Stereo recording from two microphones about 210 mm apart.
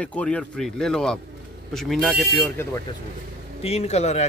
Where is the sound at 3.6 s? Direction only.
30° left (ahead or behind).